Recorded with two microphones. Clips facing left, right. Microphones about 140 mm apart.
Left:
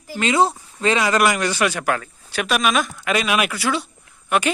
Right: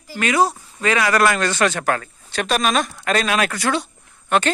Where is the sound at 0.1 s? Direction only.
25° left (ahead or behind).